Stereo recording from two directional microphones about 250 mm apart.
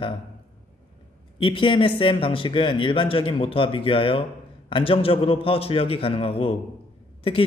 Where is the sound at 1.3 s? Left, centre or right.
Centre.